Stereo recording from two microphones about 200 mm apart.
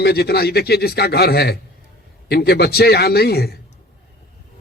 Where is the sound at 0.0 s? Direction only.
50° left (ahead or behind).